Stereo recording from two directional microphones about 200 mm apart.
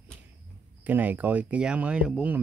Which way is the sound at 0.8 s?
10° right (ahead or behind).